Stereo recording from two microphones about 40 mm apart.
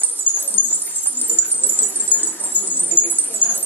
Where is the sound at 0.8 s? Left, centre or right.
Left.